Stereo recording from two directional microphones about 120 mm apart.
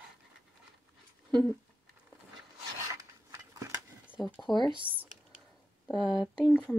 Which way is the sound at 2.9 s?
25° right (ahead or behind).